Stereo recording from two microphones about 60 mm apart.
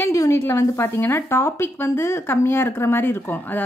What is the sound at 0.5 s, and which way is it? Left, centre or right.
A woman's voice, left.